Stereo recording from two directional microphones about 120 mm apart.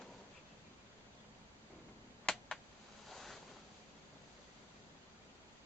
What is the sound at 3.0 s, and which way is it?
Boat, centre (ahead or behind).